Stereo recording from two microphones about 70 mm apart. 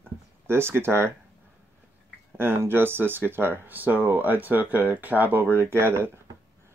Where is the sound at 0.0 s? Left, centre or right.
Right.